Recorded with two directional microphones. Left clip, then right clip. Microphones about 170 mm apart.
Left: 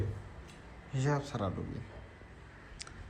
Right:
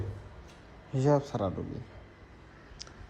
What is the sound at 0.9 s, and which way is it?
Speech, 40° right (ahead or behind).